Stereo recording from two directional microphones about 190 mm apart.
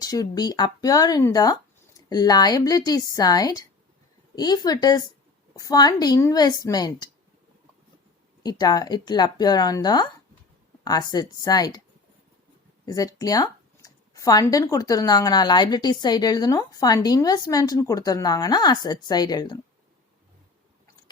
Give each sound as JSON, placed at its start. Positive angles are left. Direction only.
{"t": 0.0, "sound": "speech", "side_deg": 20}
{"t": 8.4, "sound": "speech", "side_deg": 20}
{"t": 12.8, "sound": "speech", "side_deg": 20}